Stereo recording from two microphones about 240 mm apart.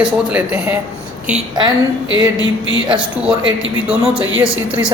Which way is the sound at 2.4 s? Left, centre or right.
Right.